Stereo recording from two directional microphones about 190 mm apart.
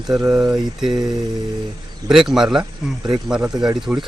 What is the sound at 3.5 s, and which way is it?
Speech, 20° right (ahead or behind).